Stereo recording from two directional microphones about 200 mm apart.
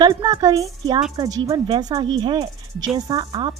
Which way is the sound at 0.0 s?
20° right (ahead or behind).